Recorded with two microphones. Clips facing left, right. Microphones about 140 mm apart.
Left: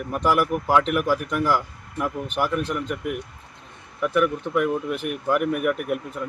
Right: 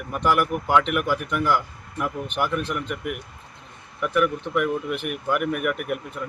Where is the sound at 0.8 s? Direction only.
35° left (ahead or behind).